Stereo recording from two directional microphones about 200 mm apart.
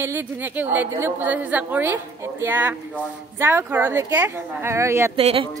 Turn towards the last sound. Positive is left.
turn(degrees=-30)  # may be behind; listen again after turning